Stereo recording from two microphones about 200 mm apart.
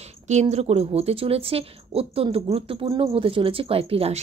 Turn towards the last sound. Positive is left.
turn(degrees=-30)  # may be behind; listen again after turning